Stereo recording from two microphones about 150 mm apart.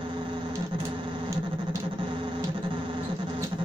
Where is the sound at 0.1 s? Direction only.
35° right (ahead or behind).